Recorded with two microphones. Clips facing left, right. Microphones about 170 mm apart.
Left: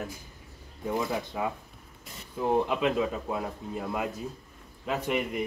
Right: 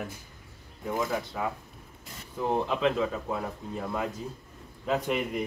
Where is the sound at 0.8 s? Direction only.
20° left (ahead or behind).